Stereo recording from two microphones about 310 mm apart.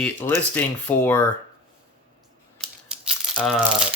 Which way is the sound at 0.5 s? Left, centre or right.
Centre.